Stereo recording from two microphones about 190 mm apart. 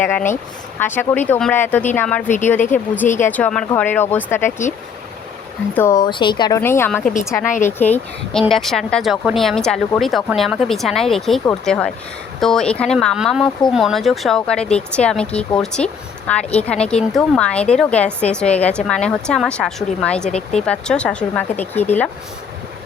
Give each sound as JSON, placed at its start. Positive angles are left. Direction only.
{"t": 0.0, "sound": "speech", "side_deg": 10}
{"t": 5.7, "sound": "speech", "side_deg": 15}
{"t": 6.6, "sound": "speech", "side_deg": 10}
{"t": 20.3, "sound": "speech", "side_deg": 35}
{"t": 20.7, "sound": "speech", "side_deg": 5}